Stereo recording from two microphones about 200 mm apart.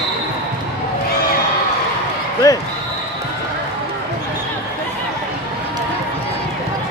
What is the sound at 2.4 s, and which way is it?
Speech, 15° left (ahead or behind).